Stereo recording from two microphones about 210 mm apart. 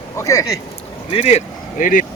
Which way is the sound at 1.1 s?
30° left (ahead or behind).